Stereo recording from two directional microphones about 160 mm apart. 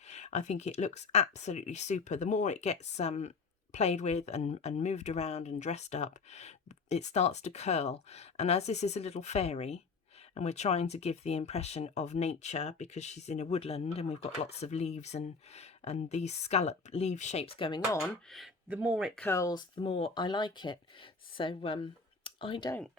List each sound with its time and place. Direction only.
0.1 s speech: 45° left (ahead or behind); by 18.0 s 25° left (ahead or behind)
18.3 s speech: centre (ahead or behind)
19.1 s speech: 15° left (ahead or behind); by 22.7 s 30° left (ahead or behind)